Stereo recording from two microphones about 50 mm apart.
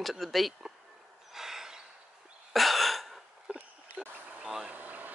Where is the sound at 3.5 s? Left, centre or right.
Right.